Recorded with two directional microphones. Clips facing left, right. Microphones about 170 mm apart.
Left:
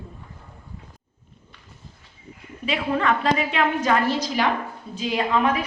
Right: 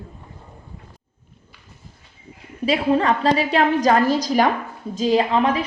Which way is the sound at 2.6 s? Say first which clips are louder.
Right 5 dB; 35° right (ahead or behind).